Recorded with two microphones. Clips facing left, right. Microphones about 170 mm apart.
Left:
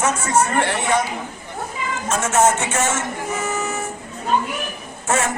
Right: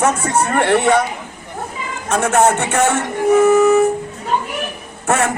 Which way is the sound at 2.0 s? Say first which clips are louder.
Right 4 dB; 60° right (ahead or behind).